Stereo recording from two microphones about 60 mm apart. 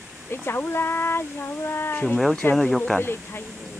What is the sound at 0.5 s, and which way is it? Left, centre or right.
Speech, left.